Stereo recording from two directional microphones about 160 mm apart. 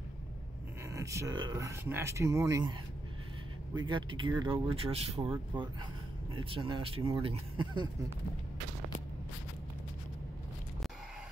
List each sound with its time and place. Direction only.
0.9 s speech: 20° right (ahead or behind)
3.7 s speech: 30° right (ahead or behind)